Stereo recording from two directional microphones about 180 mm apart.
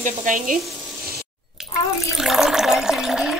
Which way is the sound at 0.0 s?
50° right (ahead or behind).